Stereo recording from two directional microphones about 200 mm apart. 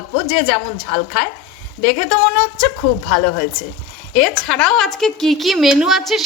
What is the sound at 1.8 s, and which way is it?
Speech, 45° left (ahead or behind).